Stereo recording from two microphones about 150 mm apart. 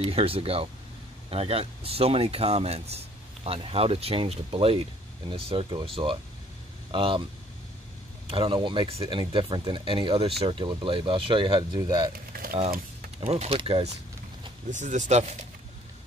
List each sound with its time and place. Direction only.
0.0 s speech: 40° right (ahead or behind)
8.3 s speech: 35° right (ahead or behind)
12.3 s a sound: 80° right
13.2 s speech: 40° right (ahead or behind)
14.7 s speech: 55° right (ahead or behind)